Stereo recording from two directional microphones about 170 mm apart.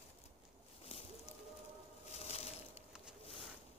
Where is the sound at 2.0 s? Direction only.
40° left (ahead or behind).